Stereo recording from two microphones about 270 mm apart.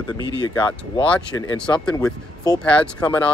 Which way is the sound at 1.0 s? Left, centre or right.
Centre.